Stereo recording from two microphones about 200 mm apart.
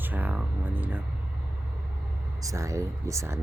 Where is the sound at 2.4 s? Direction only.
15° right (ahead or behind).